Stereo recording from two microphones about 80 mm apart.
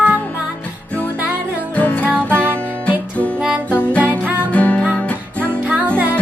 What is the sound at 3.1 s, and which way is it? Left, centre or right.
Music, centre.